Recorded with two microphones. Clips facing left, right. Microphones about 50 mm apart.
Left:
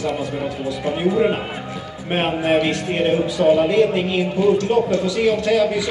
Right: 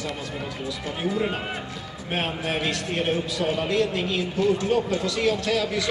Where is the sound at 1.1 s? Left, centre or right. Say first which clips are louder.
Left 7 dB; centre.